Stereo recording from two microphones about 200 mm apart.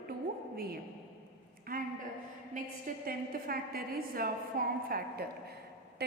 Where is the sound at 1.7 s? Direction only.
45° right (ahead or behind).